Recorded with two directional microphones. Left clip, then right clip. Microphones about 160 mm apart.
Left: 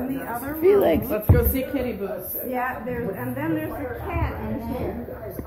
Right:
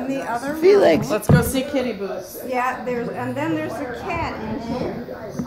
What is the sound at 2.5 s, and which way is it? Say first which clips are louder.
Speech: right 5 dB; 65° right (ahead or behind).